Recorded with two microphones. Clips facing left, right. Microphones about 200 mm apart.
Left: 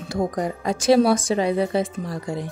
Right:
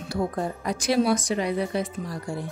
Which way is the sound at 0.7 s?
30° left (ahead or behind).